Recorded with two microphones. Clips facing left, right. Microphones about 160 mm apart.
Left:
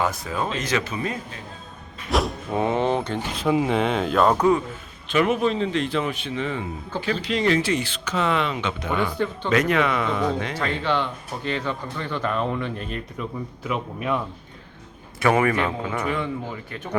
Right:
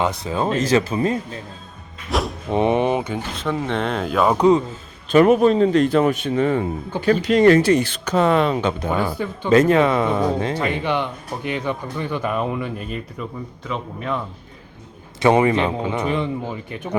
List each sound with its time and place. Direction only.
0.3 s a man's voice: 30° right (ahead or behind)
2.0 s speech: centre (ahead or behind)
2.5 s speech: 20° right (ahead or behind)
3.3 s speech: 10° left (ahead or behind)
4.4 s a man's voice: 20° right (ahead or behind)
5.1 s speech: 40° right (ahead or behind)
10.6 s speech: 15° right (ahead or behind)
13.7 s speech: 5° left (ahead or behind)
15.2 s a man's voice: 20° right (ahead or behind)